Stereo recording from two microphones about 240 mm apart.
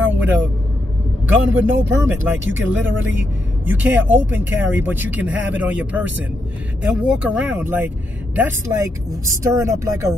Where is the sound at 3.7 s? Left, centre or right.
Centre.